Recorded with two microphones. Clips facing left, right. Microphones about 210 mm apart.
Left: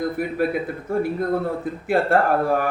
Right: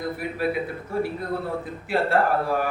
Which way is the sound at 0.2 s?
50° left (ahead or behind).